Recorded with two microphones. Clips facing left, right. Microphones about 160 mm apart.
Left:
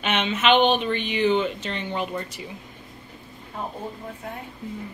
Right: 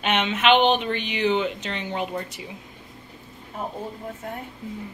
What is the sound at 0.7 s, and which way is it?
Speech, 50° left (ahead or behind).